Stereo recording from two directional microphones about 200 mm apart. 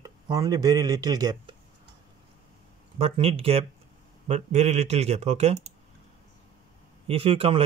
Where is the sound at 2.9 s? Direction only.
30° right (ahead or behind).